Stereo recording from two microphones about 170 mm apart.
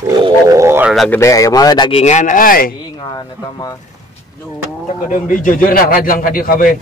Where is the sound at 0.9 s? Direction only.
Centre (ahead or behind).